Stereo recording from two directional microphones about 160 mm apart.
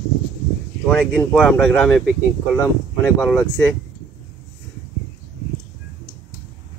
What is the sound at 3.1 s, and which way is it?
Speech, 10° left (ahead or behind).